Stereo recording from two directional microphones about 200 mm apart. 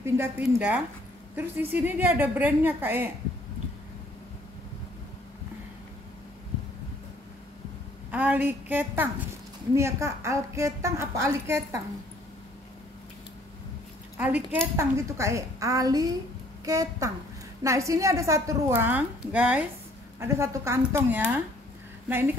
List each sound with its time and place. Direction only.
0.0 s a woman's voice: 10° right (ahead or behind)
8.1 s a woman's voice: 5° right (ahead or behind)
14.1 s a woman's voice: 10° right (ahead or behind)